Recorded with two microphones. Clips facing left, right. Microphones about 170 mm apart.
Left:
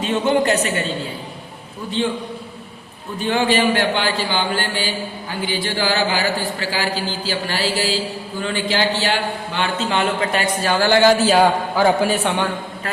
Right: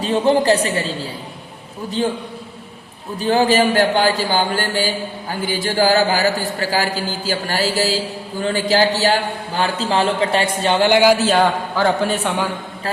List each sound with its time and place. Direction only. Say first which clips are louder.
0.0 s a man's voice: right 2 dB; 35° right (ahead or behind)
3.2 s a man's voice: right 3 dB; 40° right (ahead or behind); by 11.2 s 15° right (ahead or behind)
11.2 s a man's voice: left 1 dB; 5° left (ahead or behind)